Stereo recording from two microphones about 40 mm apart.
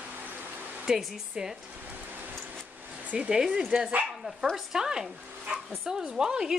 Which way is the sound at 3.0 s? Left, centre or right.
Right.